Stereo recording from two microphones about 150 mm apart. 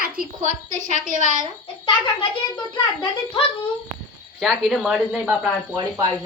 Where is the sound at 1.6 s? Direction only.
35° left (ahead or behind).